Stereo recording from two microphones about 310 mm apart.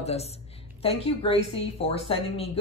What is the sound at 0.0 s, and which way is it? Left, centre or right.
A woman's voice, centre.